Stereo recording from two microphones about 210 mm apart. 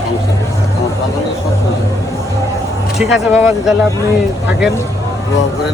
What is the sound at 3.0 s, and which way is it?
Speech, 5° right (ahead or behind).